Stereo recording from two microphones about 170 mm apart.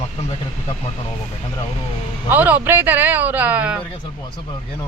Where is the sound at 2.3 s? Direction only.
10° right (ahead or behind).